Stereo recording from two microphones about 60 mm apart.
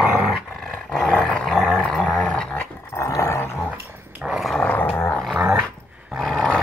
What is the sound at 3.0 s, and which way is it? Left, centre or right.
Dog, left.